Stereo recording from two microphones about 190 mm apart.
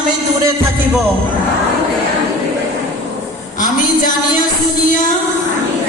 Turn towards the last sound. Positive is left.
turn(degrees=45)  # may be behind; listen again after turning